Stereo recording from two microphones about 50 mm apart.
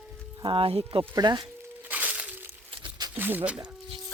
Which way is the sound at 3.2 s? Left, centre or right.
Right.